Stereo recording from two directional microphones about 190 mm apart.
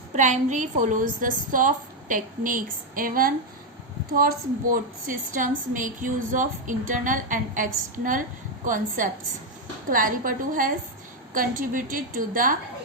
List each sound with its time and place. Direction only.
0.1 s a woman's voice: 40° right (ahead or behind)